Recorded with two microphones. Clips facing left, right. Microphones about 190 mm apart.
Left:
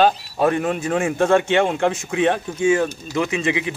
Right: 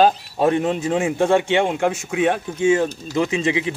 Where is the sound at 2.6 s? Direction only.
25° right (ahead or behind).